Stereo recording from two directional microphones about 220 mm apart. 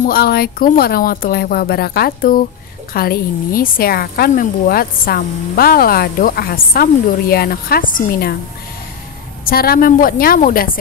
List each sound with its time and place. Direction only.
0.0 s a woman's voice: 45° left (ahead or behind)
9.4 s a woman's voice: 45° left (ahead or behind)